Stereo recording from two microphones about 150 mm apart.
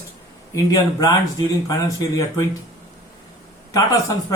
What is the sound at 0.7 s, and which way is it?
Speech, 25° left (ahead or behind).